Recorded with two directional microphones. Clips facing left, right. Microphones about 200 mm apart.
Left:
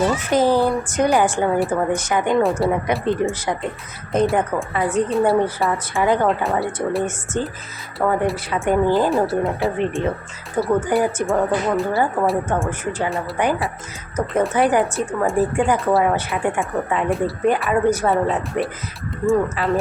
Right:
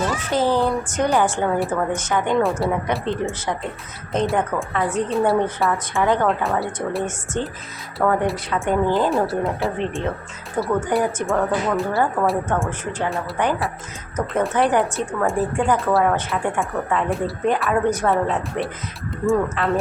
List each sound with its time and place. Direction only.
0.3 s a woman's voice: 15° left (ahead or behind)
2.3 s a woman's voice: centre (ahead or behind)
4.1 s a woman's voice: 5° left (ahead or behind)